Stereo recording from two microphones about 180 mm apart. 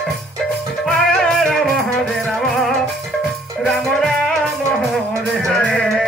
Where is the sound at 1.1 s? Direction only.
Centre (ahead or behind).